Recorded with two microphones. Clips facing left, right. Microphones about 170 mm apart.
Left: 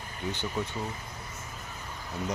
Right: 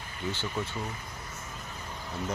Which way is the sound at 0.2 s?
15° left (ahead or behind).